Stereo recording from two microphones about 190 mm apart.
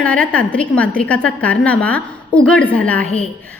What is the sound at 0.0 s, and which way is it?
A woman's voice, 5° left (ahead or behind).